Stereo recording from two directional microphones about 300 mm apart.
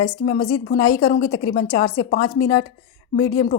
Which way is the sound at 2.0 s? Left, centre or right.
Left.